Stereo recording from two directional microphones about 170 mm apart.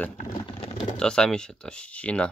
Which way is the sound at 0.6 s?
30° left (ahead or behind).